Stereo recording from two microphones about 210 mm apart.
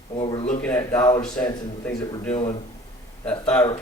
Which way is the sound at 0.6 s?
10° left (ahead or behind).